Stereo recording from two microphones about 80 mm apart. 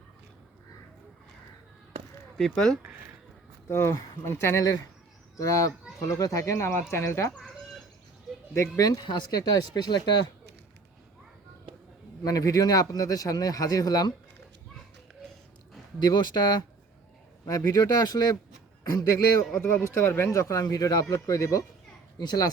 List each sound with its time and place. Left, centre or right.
2.4 s speech: centre
3.7 s speech: left
5.4 s speech: left
8.5 s speech: left
9.0 s speech: left
12.2 s speech: left
16.0 s speech: left
17.4 s speech: left
18.9 s speech: left
22.2 s speech: left